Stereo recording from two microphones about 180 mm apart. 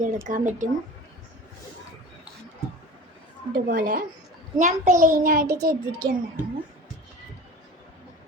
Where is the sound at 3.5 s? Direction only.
50° right (ahead or behind).